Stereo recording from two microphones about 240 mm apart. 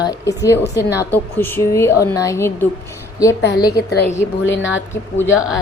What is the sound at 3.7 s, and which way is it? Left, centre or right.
A woman's voice, left.